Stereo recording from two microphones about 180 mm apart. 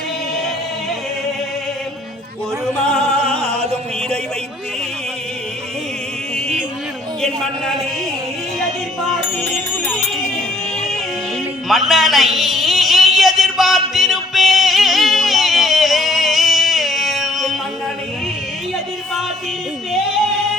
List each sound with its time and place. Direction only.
2.9 s opera: 5° left (ahead or behind)
3.5 s music: 35° right (ahead or behind)
6.3 s music: 5° right (ahead or behind)
8.6 s music: centre (ahead or behind)
11.7 s a sound: centre (ahead or behind)